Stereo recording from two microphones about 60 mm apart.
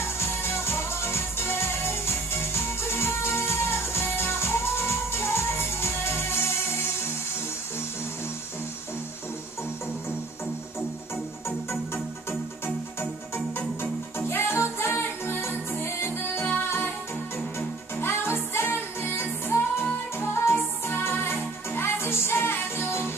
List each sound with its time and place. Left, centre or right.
0.2 s music: left
11.4 s music: left